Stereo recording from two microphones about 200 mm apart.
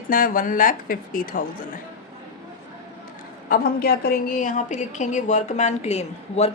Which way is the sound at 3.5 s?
50° left (ahead or behind).